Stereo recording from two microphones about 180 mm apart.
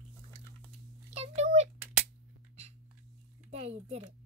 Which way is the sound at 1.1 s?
35° right (ahead or behind).